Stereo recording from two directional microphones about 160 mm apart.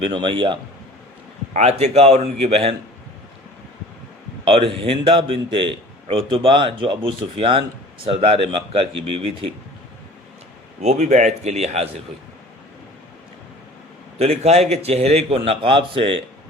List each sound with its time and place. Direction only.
0.0 s a man's voice: 30° right (ahead or behind)
1.5 s a man's voice: 40° right (ahead or behind)
4.4 s a man's voice: 35° right (ahead or behind)
10.8 s speech: 45° right (ahead or behind)
14.2 s a man's voice: 40° right (ahead or behind)